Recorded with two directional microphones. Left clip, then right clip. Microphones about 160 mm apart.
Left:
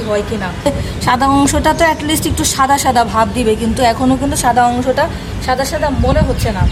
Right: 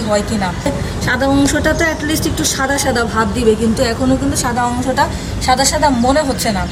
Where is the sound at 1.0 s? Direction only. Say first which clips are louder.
Left 3 dB; 90° left.